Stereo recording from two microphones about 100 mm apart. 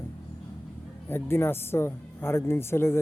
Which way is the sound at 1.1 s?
25° left (ahead or behind).